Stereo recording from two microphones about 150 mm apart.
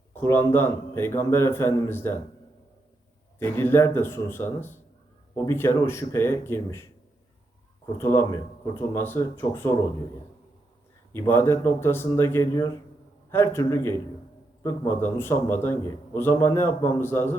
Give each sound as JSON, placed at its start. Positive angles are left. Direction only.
{"t": 0.1, "sound": "a man's voice", "side_deg": 15}
{"t": 3.3, "sound": "a man's voice", "side_deg": 15}
{"t": 7.9, "sound": "a man's voice", "side_deg": 15}
{"t": 11.1, "sound": "a man's voice", "side_deg": 15}